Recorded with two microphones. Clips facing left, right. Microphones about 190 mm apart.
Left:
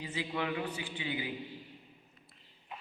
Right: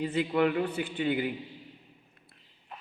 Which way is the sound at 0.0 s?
60° right (ahead or behind).